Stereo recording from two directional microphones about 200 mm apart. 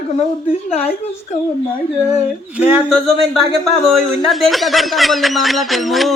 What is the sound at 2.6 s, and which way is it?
A man's voice, centre (ahead or behind).